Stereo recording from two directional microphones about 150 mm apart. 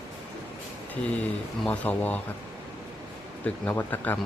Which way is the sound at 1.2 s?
10° left (ahead or behind).